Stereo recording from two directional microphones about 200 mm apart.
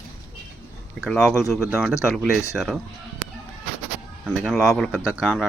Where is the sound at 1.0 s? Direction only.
5° left (ahead or behind).